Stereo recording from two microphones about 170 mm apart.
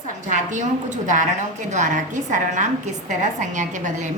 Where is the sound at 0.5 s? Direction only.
45° right (ahead or behind).